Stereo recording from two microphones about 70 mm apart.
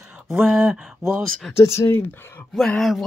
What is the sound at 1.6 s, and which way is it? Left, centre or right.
Speech, left.